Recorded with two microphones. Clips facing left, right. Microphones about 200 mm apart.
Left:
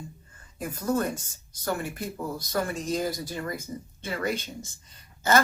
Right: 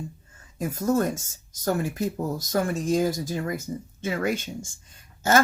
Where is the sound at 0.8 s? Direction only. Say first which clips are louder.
Right 3 dB; 45° right (ahead or behind).